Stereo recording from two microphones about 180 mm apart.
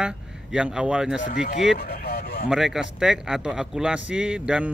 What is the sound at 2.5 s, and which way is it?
A man's voice, centre (ahead or behind).